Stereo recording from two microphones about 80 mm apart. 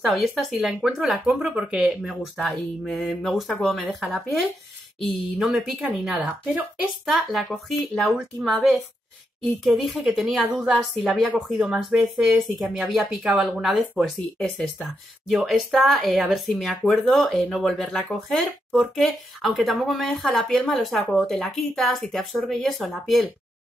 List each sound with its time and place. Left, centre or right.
0.1 s speech: centre
1.5 s speech: centre
1.9 s speech: centre
6.2 s speech: right
6.8 s speech: centre
15.2 s speech: centre